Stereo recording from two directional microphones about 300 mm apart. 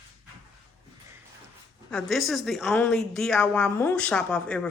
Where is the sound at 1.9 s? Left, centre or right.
Centre.